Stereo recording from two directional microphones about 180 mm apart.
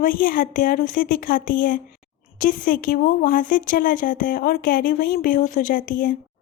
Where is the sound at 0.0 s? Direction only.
50° left (ahead or behind).